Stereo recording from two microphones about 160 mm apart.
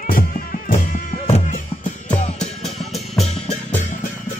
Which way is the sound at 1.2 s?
45° left (ahead or behind).